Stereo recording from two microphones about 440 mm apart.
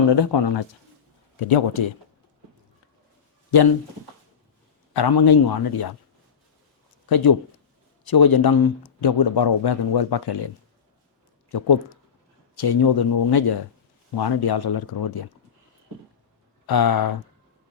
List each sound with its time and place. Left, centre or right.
0.1 s speech: left
1.5 s speech: left
4.9 s speech: left
7.1 s speech: left
16.6 s speech: left